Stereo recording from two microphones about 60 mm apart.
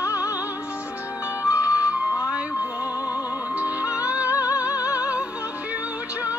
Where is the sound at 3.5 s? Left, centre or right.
Right.